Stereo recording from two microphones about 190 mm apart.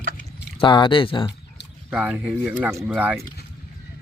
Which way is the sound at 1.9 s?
5° right (ahead or behind).